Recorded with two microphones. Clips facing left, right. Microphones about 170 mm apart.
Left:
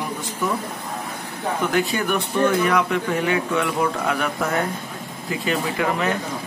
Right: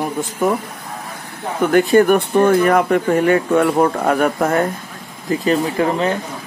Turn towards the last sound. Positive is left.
turn(degrees=-35)  # may be behind; listen again after turning